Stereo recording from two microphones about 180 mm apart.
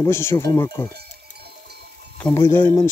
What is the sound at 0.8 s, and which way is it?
Sheep, 60° right (ahead or behind).